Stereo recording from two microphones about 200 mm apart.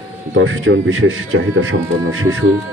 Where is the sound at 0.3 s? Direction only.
80° right.